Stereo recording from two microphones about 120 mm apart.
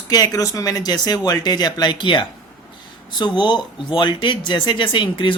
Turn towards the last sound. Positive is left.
turn(degrees=45)  # may be behind; listen again after turning